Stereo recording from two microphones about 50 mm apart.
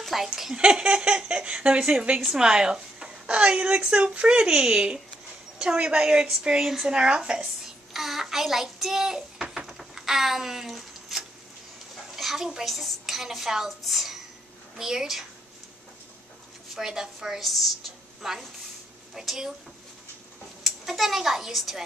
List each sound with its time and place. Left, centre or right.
0.0 s a woman's voice: centre
0.6 s speech: centre
12.2 s a sound: centre
12.6 s a woman's voice: centre
16.7 s a woman's voice: centre
20.6 s a child's voice: centre